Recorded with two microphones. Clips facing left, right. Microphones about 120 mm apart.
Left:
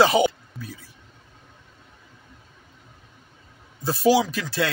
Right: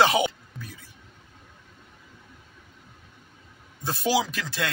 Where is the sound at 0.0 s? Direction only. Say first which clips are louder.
Left 3 dB; centre (ahead or behind).